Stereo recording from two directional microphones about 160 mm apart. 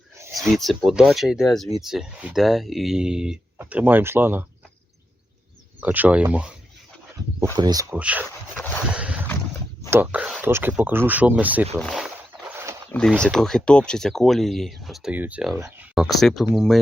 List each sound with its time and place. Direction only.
0.6 s speech: centre (ahead or behind)
5.8 s speech: 10° right (ahead or behind)
7.5 s speech: 25° right (ahead or behind)
7.9 s a sound: 10° right (ahead or behind)
9.9 s speech: 10° right (ahead or behind)
11.8 s speech: centre (ahead or behind)